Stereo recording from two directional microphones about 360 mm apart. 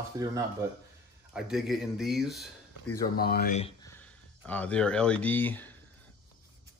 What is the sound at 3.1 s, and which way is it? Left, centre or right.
Speech, left.